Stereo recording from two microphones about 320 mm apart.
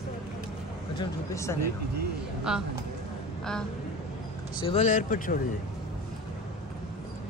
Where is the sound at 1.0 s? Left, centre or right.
Centre.